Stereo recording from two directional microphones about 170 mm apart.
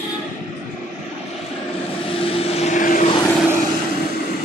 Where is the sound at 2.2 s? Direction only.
35° left (ahead or behind).